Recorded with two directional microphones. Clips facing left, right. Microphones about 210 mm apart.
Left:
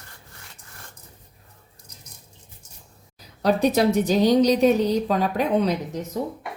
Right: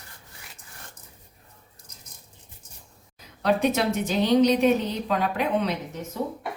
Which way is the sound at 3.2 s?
35° left (ahead or behind).